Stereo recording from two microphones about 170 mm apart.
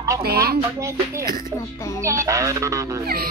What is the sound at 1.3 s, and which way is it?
Speech, 60° right (ahead or behind).